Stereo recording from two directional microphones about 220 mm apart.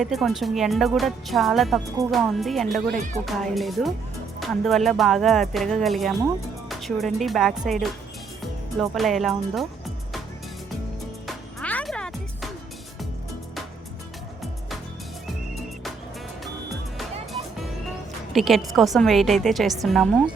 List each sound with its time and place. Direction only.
0.0 s a woman's voice: centre (ahead or behind)
2.9 s speech: 35° right (ahead or behind)
3.2 s a woman's voice: centre (ahead or behind)
11.3 s music: 5° left (ahead or behind)
18.3 s a woman's voice: centre (ahead or behind)